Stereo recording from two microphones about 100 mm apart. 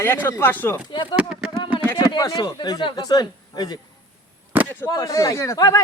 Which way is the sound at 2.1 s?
45° left (ahead or behind).